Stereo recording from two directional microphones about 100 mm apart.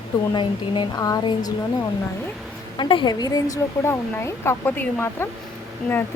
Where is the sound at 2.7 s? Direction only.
55° left (ahead or behind).